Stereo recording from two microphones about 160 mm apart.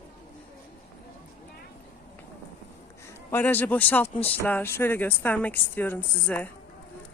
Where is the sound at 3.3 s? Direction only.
10° left (ahead or behind).